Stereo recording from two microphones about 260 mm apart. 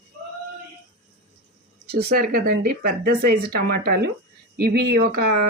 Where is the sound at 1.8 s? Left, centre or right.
Right.